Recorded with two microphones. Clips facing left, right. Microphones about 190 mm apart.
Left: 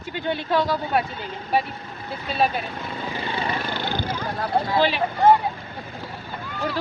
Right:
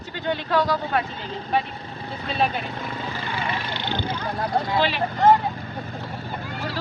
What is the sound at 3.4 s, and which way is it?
Vehicle, 45° left (ahead or behind).